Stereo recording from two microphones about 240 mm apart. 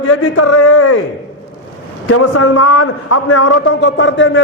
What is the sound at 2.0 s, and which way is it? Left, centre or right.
A man's voice, left.